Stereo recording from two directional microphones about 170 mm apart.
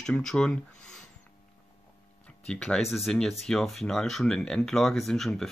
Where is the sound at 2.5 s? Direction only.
5° left (ahead or behind).